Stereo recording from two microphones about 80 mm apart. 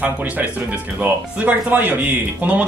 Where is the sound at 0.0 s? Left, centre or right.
Right.